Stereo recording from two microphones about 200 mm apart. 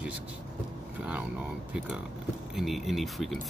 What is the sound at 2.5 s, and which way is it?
Speech, centre (ahead or behind).